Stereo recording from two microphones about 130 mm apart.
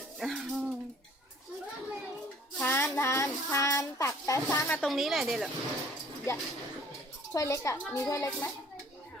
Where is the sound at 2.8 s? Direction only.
20° left (ahead or behind).